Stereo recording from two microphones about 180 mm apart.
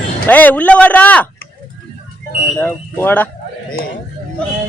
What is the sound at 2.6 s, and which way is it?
Speech, 10° left (ahead or behind).